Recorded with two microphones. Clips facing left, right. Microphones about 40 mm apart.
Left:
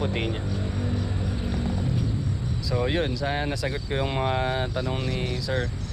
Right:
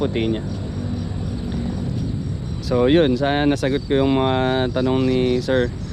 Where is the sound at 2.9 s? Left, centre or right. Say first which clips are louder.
Right 10 dB; right.